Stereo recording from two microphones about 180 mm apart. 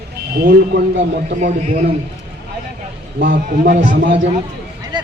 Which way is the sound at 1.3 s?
45° right (ahead or behind).